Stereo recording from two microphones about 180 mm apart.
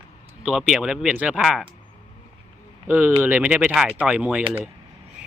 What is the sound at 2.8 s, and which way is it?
Speech, 10° right (ahead or behind).